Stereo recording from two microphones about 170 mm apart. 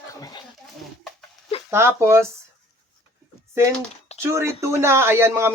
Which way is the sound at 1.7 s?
15° right (ahead or behind).